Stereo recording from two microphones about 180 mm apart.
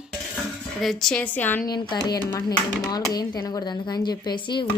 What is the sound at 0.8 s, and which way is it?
Speech, centre (ahead or behind).